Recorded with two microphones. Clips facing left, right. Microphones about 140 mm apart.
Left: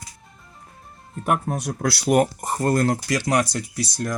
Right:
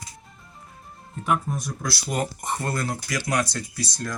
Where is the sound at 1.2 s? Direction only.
55° left (ahead or behind).